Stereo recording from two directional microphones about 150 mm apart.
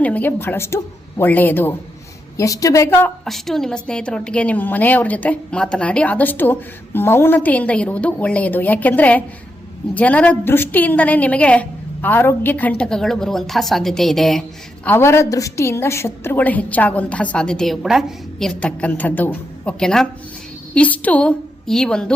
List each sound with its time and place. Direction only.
0.0 s a woman's voice: 10° left (ahead or behind)
3.2 s a woman's voice: centre (ahead or behind)
14.8 s a woman's voice: 15° left (ahead or behind)